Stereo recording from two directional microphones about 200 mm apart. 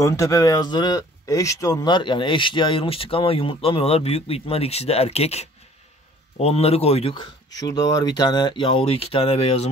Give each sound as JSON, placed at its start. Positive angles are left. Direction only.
{"t": 0.0, "sound": "speech", "side_deg": 15}
{"t": 7.6, "sound": "speech", "side_deg": 20}